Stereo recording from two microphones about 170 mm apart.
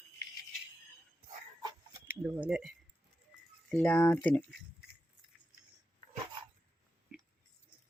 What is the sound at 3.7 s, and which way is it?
Speech, 10° left (ahead or behind).